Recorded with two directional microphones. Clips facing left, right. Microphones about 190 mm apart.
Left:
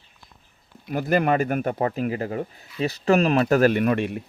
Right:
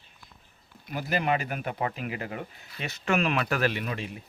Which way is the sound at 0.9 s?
50° left (ahead or behind).